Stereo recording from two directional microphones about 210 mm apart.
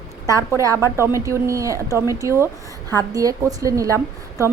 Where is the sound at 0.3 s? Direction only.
15° right (ahead or behind).